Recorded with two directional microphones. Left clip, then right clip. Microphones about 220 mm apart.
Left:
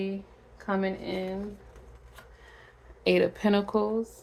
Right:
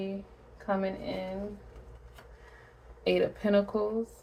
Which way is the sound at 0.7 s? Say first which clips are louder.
Left 1 dB; 45° left (ahead or behind).